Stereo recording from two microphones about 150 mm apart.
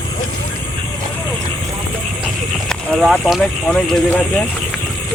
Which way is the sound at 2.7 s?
Centre (ahead or behind).